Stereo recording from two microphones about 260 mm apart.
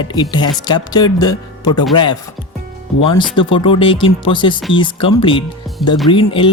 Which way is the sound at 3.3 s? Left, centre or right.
Centre.